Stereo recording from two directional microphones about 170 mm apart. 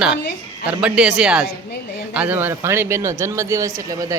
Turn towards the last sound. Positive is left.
turn(degrees=-20)  # may be behind; listen again after turning